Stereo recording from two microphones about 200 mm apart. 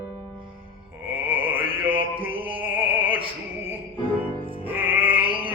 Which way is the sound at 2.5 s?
10° right (ahead or behind).